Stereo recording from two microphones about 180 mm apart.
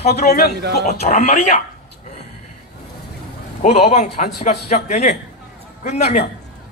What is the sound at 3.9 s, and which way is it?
Speech, 40° left (ahead or behind).